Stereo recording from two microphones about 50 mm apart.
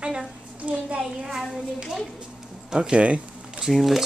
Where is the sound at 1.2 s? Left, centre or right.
Centre.